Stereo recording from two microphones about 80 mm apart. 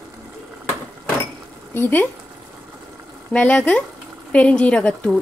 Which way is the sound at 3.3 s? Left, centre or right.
Centre.